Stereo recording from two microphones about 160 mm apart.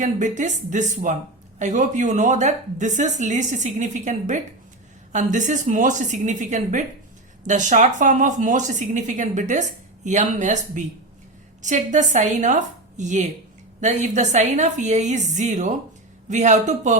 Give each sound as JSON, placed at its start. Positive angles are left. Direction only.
{"t": 0.0, "sound": "a woman's voice", "side_deg": -50}